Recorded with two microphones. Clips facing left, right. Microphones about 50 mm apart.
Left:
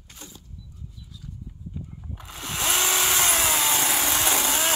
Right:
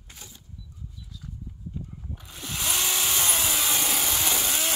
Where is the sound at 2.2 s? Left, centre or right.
Left.